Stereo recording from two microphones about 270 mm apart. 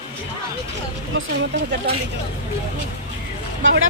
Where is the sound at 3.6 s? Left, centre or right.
Right.